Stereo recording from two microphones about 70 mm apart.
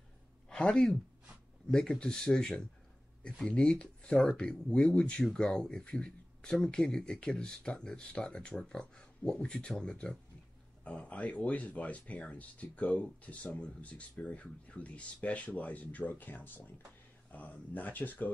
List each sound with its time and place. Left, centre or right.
0.5 s speech: centre